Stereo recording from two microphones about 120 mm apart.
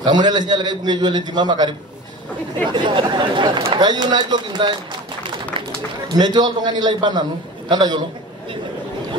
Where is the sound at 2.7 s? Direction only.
40° right (ahead or behind).